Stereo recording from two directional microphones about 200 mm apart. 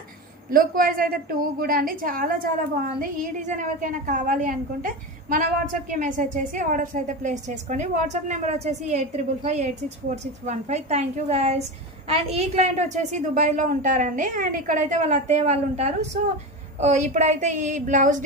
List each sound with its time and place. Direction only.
0.5 s a woman's voice: 45° right (ahead or behind)